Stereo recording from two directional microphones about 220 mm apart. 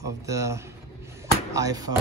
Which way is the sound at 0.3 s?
15° right (ahead or behind).